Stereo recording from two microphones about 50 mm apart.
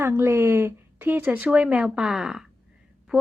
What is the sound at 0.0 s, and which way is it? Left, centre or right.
Speech, right.